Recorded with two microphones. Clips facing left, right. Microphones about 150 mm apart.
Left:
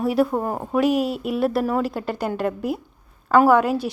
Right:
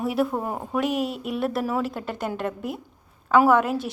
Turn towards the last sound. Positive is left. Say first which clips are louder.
# left 3 dB
turn(degrees=0)  # may be behind; listen again after turning